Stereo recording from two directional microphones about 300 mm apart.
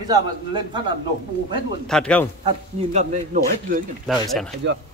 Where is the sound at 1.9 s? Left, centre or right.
Centre.